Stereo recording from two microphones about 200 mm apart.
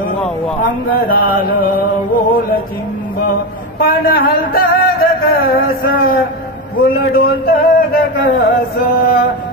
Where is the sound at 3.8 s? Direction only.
50° left (ahead or behind).